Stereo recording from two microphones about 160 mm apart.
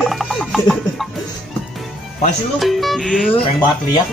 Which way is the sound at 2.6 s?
Centre (ahead or behind).